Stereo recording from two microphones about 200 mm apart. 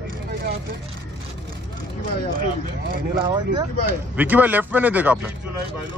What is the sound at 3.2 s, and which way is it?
Speech, 25° right (ahead or behind).